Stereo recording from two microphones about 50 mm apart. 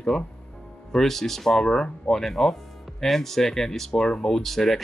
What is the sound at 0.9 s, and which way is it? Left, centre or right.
Speech, centre.